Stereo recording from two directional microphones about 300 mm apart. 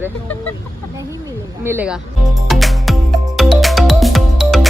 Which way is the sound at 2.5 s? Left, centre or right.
Centre.